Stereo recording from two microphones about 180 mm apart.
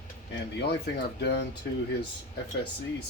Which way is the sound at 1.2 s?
65° left (ahead or behind).